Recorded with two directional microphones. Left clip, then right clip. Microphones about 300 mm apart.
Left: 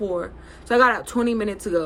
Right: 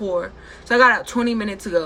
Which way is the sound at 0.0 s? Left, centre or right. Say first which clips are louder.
Right 3 dB; centre.